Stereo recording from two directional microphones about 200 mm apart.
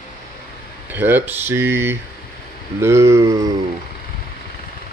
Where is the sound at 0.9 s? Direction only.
10° right (ahead or behind).